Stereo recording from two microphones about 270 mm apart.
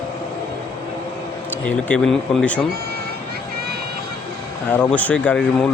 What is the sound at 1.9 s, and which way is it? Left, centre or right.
Speech, centre.